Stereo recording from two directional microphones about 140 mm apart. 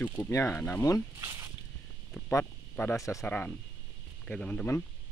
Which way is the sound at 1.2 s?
20° right (ahead or behind).